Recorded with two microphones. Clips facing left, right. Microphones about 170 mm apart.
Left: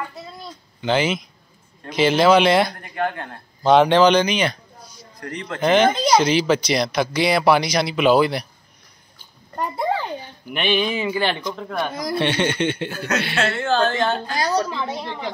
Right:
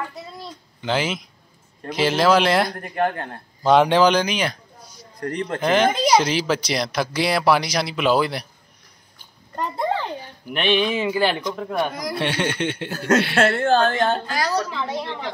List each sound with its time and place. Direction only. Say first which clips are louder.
0.8 s a man's voice: left 3 dB; centre (ahead or behind)
2.8 s a woman's voice: right 2 dB; 45° right (ahead or behind)
3.6 s a man's voice: left 2 dB; 5° right (ahead or behind)
5.2 s a woman's voice: right 5 dB; 50° right (ahead or behind)
5.6 s a man's voice: left 3 dB; 5° right (ahead or behind)
9.6 s a sound: left 1 dB; 10° left (ahead or behind)
10.2 s a man's voice: right 1 dB; centre (ahead or behind)
12.9 s a woman's voice: right 5 dB; 45° right (ahead or behind)
14.3 s a woman's voice: left 1 dB; 20° left (ahead or behind)